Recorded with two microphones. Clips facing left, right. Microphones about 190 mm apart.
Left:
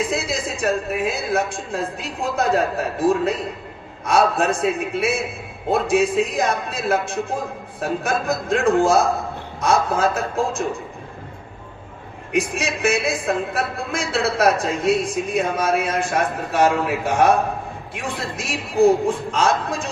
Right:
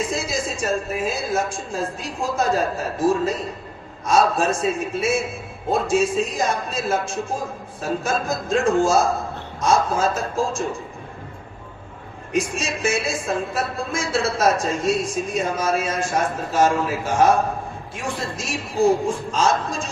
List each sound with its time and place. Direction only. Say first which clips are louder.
0.0 s a woman's voice: left 1 dB; 60° left (ahead or behind)
1.5 s a woman's voice: left 1 dB; centre (ahead or behind)
2.2 s a woman's voice: left 1 dB; 60° left (ahead or behind)
12.3 s a woman's voice: left 1 dB; 60° left (ahead or behind)